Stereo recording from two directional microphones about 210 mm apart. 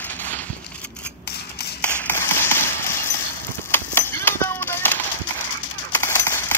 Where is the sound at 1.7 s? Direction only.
10° left (ahead or behind).